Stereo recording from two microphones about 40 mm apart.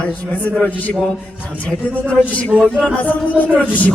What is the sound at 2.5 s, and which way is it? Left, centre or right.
Speech, right.